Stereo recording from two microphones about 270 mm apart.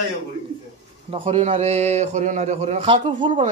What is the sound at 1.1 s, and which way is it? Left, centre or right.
A man's voice, right.